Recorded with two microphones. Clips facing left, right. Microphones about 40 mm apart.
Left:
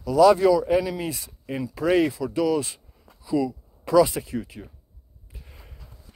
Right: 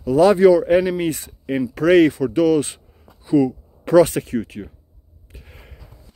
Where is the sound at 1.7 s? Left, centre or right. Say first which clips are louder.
Right 7 dB; right.